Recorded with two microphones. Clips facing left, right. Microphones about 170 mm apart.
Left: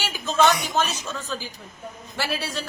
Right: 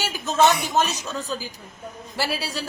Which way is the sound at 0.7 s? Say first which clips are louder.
Right 2 dB; 40° right (ahead or behind).